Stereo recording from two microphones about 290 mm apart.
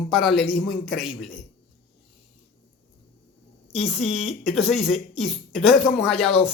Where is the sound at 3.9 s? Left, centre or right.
Centre.